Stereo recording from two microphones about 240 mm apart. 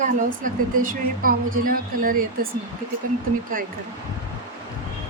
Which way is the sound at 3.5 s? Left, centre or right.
Right.